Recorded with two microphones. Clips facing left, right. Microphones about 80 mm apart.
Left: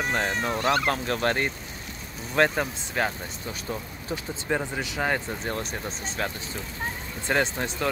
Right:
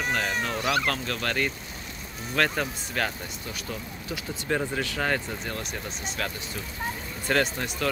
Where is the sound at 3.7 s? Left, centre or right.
Left.